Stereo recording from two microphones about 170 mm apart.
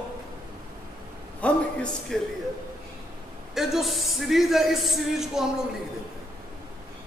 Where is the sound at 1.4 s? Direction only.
5° left (ahead or behind).